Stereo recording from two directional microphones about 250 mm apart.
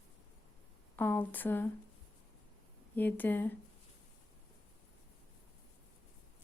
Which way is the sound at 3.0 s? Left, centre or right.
Centre.